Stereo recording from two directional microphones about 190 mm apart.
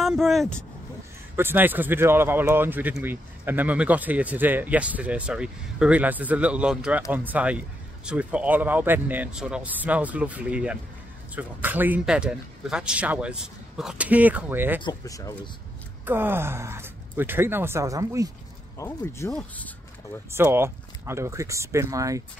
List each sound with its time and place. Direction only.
0.0 s speech: centre (ahead or behind)
1.3 s speech: 10° right (ahead or behind)
14.8 s speech: 20° left (ahead or behind)
16.1 s speech: 10° right (ahead or behind)
18.8 s speech: 15° left (ahead or behind)
20.2 s speech: 10° right (ahead or behind)